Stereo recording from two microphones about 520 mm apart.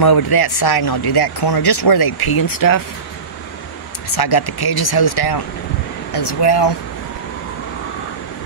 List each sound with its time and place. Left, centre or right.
0.0 s speech: left
4.1 s speech: left